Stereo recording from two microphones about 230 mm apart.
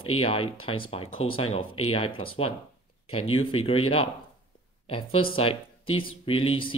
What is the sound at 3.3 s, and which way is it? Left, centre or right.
Speech, left.